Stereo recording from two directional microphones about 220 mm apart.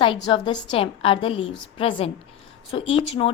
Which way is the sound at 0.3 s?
20° left (ahead or behind).